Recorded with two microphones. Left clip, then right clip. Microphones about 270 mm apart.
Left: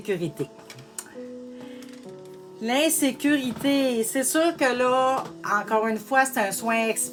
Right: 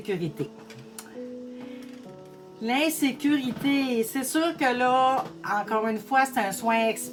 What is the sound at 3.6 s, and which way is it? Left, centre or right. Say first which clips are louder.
Speech: left 2 dB; left.